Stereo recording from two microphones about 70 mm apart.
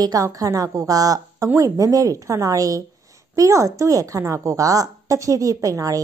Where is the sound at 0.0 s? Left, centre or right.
Right.